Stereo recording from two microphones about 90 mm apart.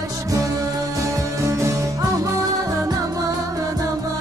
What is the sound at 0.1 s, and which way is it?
Music, 40° right (ahead or behind).